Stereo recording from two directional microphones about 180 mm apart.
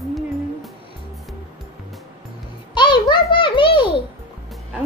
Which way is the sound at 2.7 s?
25° left (ahead or behind).